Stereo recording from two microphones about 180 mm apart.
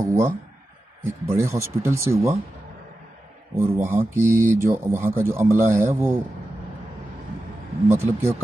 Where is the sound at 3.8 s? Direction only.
15° right (ahead or behind).